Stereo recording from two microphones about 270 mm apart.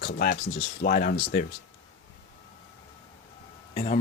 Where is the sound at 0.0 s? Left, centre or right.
Left.